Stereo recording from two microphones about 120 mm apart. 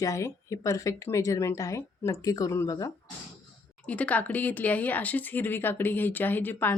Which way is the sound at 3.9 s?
10° left (ahead or behind).